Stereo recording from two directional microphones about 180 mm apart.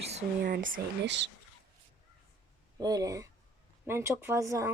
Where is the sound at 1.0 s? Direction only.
75° right (ahead or behind).